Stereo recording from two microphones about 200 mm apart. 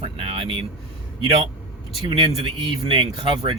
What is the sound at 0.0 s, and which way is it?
Air conditioning, 30° right (ahead or behind).